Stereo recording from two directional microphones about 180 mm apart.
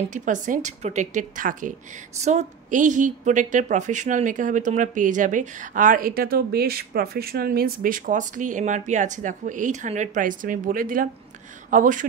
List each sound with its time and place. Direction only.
0.1 s a woman's voice: 45° right (ahead or behind)